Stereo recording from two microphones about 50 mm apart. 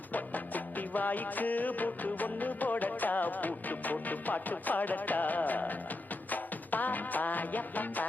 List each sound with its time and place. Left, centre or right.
0.1 s music: left